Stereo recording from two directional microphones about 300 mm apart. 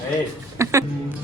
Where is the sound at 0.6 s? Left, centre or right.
Centre.